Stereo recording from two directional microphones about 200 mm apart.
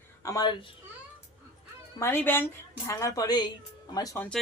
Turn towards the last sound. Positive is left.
turn(degrees=15)  # may be behind; listen again after turning